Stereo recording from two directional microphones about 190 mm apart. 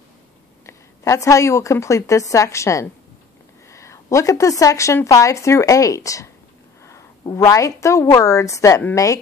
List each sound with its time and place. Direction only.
0.7 s a woman's voice: 15° left (ahead or behind)